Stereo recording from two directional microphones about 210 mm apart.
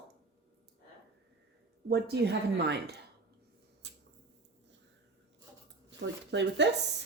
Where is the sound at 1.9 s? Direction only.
50° right (ahead or behind).